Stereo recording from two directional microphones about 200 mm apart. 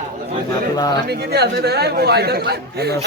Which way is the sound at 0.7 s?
20° left (ahead or behind).